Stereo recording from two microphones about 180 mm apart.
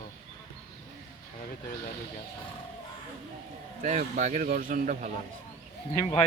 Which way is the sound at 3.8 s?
45° right (ahead or behind).